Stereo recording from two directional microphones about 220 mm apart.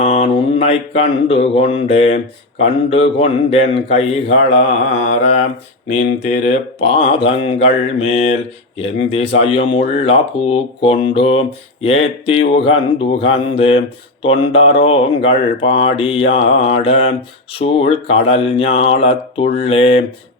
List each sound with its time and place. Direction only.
0.0 s mantra: 30° left (ahead or behind)
2.6 s speech: 25° left (ahead or behind)
5.9 s speech: 30° left (ahead or behind)